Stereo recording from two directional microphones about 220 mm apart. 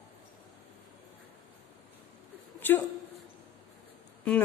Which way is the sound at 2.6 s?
10° left (ahead or behind).